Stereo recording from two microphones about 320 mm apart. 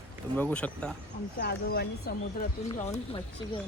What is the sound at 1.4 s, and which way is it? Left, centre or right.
Speech, left.